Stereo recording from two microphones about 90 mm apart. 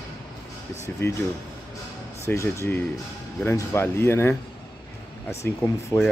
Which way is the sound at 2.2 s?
30° left (ahead or behind).